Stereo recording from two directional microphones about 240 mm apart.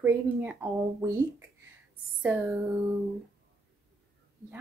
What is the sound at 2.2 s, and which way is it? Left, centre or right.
Speech, centre.